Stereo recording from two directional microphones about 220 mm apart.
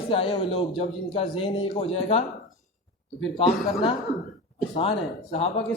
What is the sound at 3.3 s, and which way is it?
Speech, 20° left (ahead or behind).